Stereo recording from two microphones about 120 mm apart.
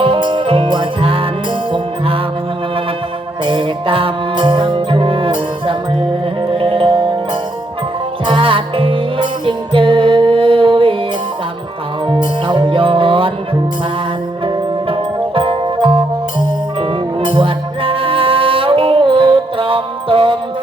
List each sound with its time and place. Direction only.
0.0 s music: 45° right (ahead or behind)
3.4 s music: 45° right (ahead or behind)
6.5 s music: 50° right (ahead or behind)
8.3 s music: 45° right (ahead or behind)
12.0 s music: 40° right (ahead or behind)
15.4 s music: 45° right (ahead or behind)
17.2 s music: 50° right (ahead or behind)